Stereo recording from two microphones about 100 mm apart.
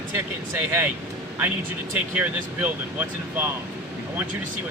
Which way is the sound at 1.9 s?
15° right (ahead or behind).